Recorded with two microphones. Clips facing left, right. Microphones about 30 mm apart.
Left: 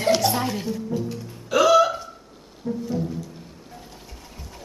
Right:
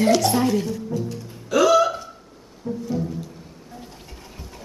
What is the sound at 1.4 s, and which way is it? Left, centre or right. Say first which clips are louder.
Hiccup: even; centre.